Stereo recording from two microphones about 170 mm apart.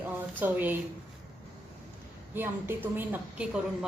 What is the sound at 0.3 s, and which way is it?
Speech, 10° right (ahead or behind).